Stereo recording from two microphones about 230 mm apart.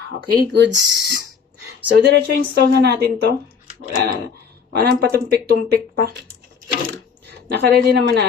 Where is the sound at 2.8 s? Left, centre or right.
Right.